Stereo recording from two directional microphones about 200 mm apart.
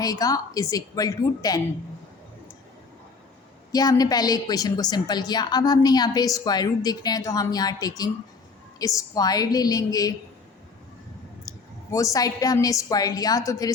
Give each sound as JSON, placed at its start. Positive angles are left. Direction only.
{"t": 0.0, "sound": "a woman's voice", "side_deg": 20}
{"t": 3.7, "sound": "a woman's voice", "side_deg": 20}
{"t": 11.4, "sound": "a woman's voice", "side_deg": 15}